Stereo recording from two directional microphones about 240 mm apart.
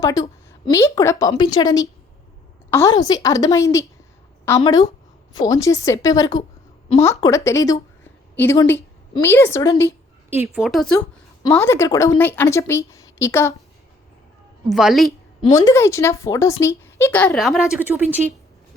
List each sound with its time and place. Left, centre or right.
0.0 s a woman's voice: centre
10.2 s a woman's voice: centre
14.7 s a woman's voice: centre
15.5 s speech: centre